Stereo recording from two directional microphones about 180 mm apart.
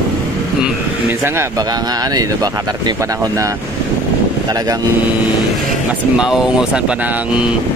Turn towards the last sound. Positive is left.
turn(degrees=-5)  # may be behind; listen again after turning